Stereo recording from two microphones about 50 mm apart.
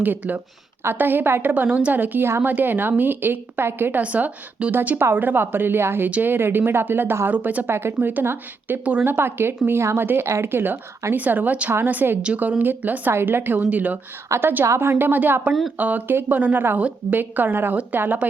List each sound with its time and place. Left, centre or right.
0.0 s a woman's voice: right
4.0 s speech: right
4.7 s a woman's voice: right
7.3 s a woman's voice: right
7.7 s a woman's voice: right
8.0 s a woman's voice: right
13.1 s speech: right
13.7 s a woman's voice: right
14.3 s a woman's voice: right